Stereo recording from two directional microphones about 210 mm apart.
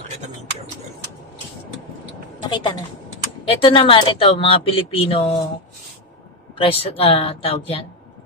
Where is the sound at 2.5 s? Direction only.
20° left (ahead or behind).